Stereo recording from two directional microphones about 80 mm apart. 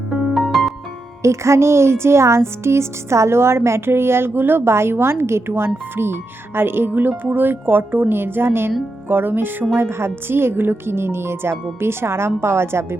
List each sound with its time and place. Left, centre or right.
0.3 s music: centre
1.2 s a woman's voice: right